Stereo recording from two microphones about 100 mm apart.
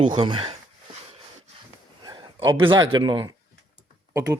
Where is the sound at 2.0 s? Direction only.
50° right (ahead or behind).